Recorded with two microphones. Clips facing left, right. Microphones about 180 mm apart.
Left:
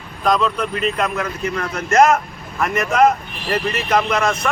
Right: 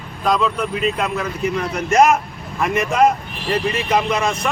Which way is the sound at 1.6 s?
10° right (ahead or behind).